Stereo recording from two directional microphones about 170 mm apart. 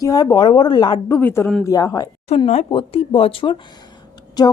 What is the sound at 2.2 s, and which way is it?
A woman's voice, 35° left (ahead or behind).